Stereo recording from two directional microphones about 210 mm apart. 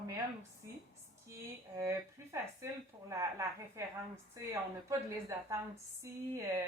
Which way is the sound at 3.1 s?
15° right (ahead or behind).